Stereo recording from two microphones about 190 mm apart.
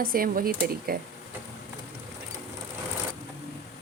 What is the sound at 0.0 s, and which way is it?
Speech, 50° right (ahead or behind).